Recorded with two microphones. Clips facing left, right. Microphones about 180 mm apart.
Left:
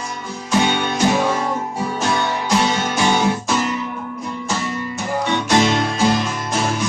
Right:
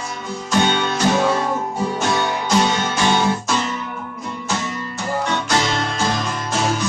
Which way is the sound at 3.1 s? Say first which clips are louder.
Even; 15° left (ahead or behind).